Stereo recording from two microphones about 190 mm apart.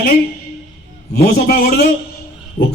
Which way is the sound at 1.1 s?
55° left (ahead or behind).